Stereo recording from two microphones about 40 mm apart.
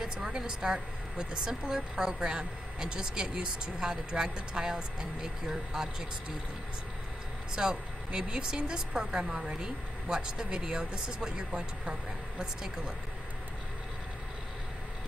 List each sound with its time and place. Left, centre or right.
0.0 s a woman's voice: centre
7.5 s speech: centre